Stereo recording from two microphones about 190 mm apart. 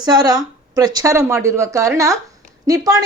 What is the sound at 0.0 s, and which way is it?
A woman's voice, 20° right (ahead or behind).